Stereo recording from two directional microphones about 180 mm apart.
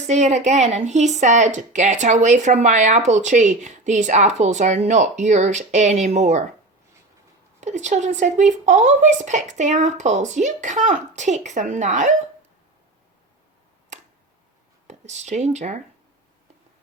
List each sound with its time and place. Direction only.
0.1 s a woman's voice: 40° right (ahead or behind)
7.6 s a woman's voice: 40° right (ahead or behind)
14.8 s speech: 40° right (ahead or behind)